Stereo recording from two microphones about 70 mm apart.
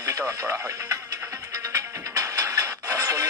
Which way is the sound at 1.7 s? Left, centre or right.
Right.